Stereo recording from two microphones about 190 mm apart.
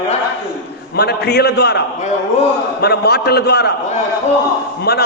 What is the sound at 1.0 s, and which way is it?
A man's voice, 60° left (ahead or behind).